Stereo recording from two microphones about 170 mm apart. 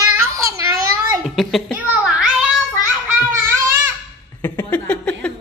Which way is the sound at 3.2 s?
15° right (ahead or behind).